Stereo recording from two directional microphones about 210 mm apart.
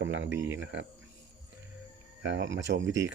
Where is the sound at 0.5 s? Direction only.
60° right (ahead or behind).